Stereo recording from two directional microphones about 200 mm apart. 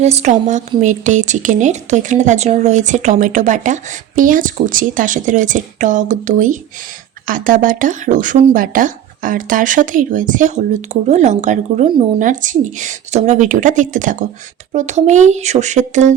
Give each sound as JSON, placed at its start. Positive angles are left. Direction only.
{"t": 0.0, "sound": "speech", "side_deg": -35}